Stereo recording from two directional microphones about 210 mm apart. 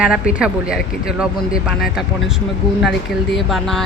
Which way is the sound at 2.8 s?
Centre (ahead or behind).